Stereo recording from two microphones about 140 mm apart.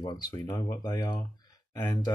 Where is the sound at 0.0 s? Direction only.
30° left (ahead or behind).